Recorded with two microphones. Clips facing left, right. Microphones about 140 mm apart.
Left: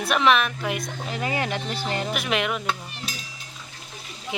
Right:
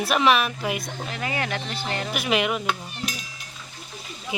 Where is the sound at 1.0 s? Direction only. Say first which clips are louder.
Left 2 dB; 25° left (ahead or behind).